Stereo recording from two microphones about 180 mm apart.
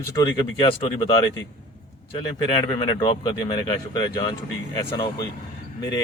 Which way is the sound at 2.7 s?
25° left (ahead or behind).